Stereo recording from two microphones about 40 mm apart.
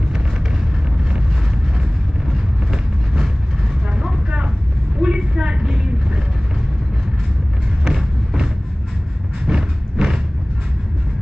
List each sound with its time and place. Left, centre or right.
2.3 s vehicle: centre
5.0 s vehicle: right
7.8 s music: centre
9.5 s vehicle: centre